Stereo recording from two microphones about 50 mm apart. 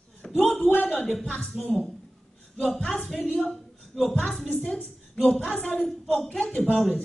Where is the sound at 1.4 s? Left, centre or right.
Centre.